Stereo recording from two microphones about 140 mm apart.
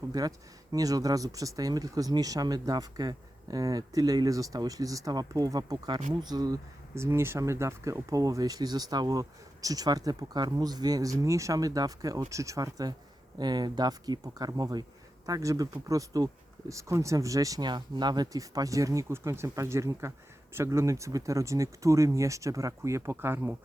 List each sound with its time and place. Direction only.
0.1 s speech: 25° right (ahead or behind)